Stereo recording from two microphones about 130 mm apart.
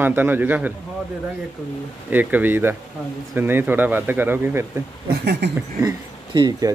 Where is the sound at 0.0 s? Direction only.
15° right (ahead or behind).